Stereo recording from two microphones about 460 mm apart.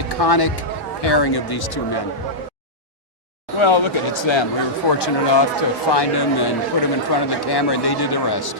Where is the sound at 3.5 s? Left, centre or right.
Left.